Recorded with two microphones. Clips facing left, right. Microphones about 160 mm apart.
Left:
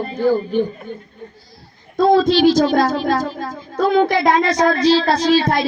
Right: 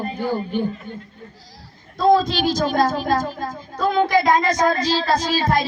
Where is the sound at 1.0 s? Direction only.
90° right.